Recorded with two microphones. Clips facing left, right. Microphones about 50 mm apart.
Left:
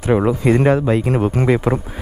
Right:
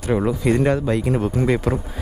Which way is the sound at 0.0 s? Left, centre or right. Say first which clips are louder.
Left 4 dB; left.